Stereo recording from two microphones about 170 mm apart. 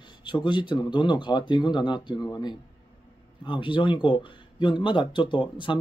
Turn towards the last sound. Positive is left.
turn(degrees=30)  # may be behind; listen again after turning